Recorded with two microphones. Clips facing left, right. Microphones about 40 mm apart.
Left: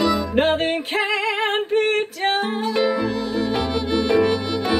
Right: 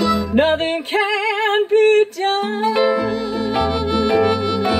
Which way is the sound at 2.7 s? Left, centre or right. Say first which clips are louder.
Right 3 dB; right.